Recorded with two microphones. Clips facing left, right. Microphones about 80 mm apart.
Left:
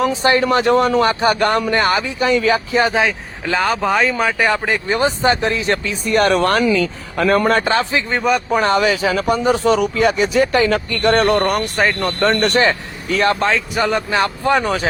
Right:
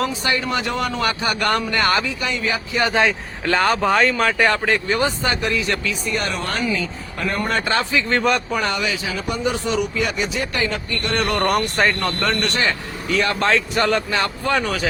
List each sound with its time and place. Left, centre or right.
0.0 s speech: left
2.9 s speech: centre
4.9 s speech: left
6.1 s speech: left
6.3 s speech: left
7.6 s speech: left
8.1 s speech: centre
8.5 s speech: left
8.9 s speech: left
9.3 s speech: left
11.4 s speech: centre
12.2 s speech: left
13.4 s speech: centre
13.9 s speech: left